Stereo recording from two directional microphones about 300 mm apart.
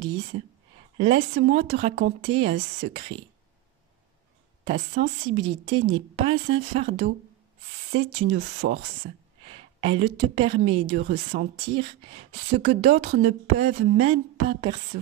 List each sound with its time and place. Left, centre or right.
0.9 s a woman's voice: centre
1.3 s speech: right
4.6 s a woman's voice: right
8.3 s speech: right
9.8 s speech: centre
11.1 s speech: right
11.6 s speech: centre